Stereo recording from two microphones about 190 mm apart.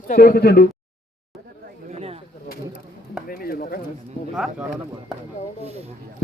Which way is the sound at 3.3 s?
50° left (ahead or behind).